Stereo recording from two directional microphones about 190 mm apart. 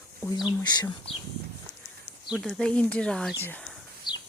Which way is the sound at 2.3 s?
Centre (ahead or behind).